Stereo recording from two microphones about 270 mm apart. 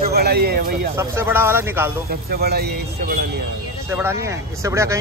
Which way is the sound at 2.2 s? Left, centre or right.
Right.